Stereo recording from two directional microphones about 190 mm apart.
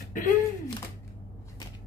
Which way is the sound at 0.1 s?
45° left (ahead or behind).